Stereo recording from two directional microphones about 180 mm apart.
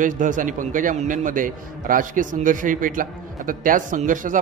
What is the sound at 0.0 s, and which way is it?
A man's voice, 45° right (ahead or behind).